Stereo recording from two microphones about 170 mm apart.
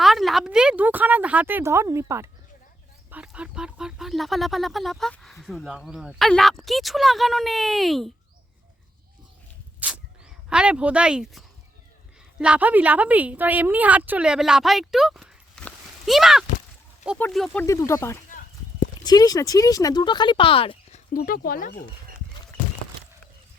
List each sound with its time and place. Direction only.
0.0 s speech: centre (ahead or behind)
9.8 s a sound: 10° right (ahead or behind)
10.5 s a woman's voice: 5° right (ahead or behind)
15.6 s a sound: centre (ahead or behind)
17.3 s speech: 5° left (ahead or behind)
17.7 s speech: 15° left (ahead or behind); by 21.0 s 30° left (ahead or behind)
21.1 s speech: 60° left (ahead or behind)